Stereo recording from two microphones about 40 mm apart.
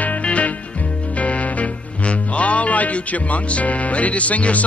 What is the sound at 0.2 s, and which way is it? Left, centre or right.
Music, left.